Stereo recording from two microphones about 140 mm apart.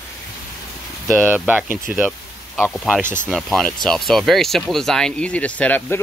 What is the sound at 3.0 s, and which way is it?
Speech, 70° left (ahead or behind).